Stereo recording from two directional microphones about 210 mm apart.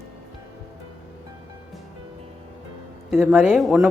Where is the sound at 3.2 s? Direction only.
10° right (ahead or behind).